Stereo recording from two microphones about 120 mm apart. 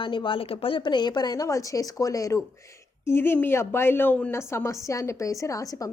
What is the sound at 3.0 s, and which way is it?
A woman's voice, 20° left (ahead or behind).